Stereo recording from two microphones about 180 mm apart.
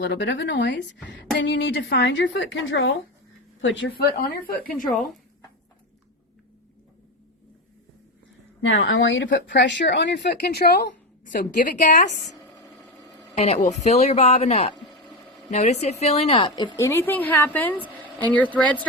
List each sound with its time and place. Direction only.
0.0 s a woman's voice: 75° left (ahead or behind)
4.0 s a woman's voice: 55° left (ahead or behind)
4.9 s speech: centre (ahead or behind)
8.6 s a woman's voice: 90° left; by 10.8 s 65° left (ahead or behind)
11.3 s a woman's voice: 50° left (ahead or behind)
13.3 s a woman's voice: 35° left (ahead or behind); by 18.9 s 5° left (ahead or behind)